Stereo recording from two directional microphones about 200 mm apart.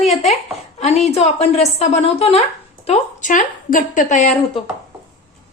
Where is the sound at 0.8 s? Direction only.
35° left (ahead or behind).